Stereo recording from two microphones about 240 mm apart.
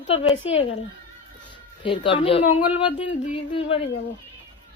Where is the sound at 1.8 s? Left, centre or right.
Left.